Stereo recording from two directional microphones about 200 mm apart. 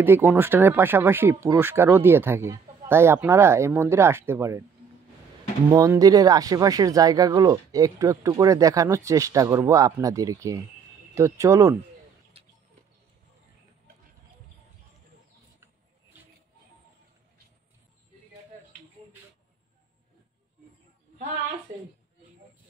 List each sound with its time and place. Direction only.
0.0 s speech: 10° right (ahead or behind)
5.7 s speech: 15° right (ahead or behind)
12.4 s a sound: 30° right (ahead or behind)